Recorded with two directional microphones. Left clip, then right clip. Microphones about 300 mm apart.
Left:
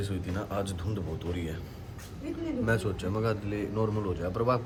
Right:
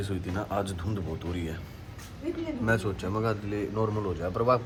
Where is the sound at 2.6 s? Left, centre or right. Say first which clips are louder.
Right 2 dB; centre.